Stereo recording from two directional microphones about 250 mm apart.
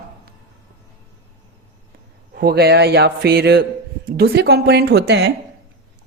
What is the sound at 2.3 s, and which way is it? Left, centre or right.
A man's voice, right.